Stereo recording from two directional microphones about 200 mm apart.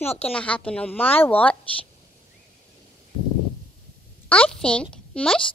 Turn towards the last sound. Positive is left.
turn(degrees=5)  # may be behind; listen again after turning